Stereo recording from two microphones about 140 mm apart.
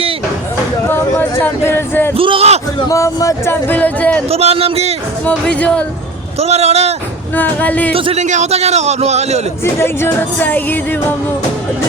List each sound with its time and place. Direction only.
0.9 s speech: 15° left (ahead or behind)
2.1 s a man's voice: 40° right (ahead or behind)
2.9 s speech: 25° left (ahead or behind)
4.3 s a man's voice: 45° right (ahead or behind)
5.2 s speech: 10° left (ahead or behind)
6.4 s a man's voice: 50° right (ahead or behind)
7.3 s speech: 10° left (ahead or behind)
7.9 s speech: 40° right (ahead or behind)
8.2 s a man's voice: 55° right (ahead or behind)
9.8 s speech: 15° left (ahead or behind)